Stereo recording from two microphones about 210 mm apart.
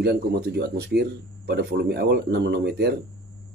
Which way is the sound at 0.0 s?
50° right (ahead or behind).